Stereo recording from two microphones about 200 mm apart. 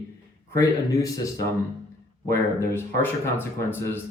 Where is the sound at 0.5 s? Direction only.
15° left (ahead or behind).